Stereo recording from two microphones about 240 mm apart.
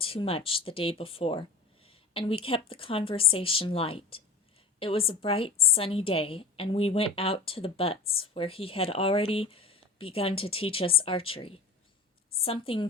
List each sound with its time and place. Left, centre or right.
0.0 s a woman's voice: left